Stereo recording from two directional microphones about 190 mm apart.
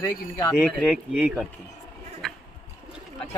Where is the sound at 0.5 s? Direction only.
5° right (ahead or behind).